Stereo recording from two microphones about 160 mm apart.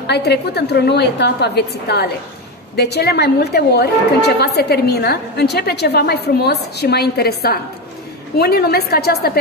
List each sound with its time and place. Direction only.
0.0 s a woman's voice: 90° left